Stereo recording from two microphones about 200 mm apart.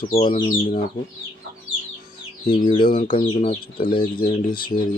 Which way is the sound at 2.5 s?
25° left (ahead or behind).